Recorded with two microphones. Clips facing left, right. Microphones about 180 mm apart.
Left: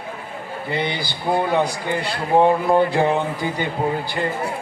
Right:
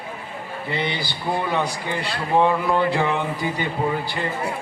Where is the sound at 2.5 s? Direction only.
40° left (ahead or behind).